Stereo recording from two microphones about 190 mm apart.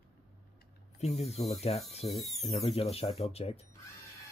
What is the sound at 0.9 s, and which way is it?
Speech, 35° left (ahead or behind).